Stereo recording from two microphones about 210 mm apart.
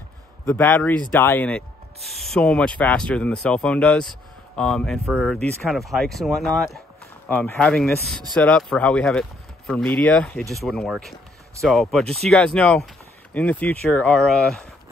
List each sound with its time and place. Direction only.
0.5 s speech: 10° left (ahead or behind)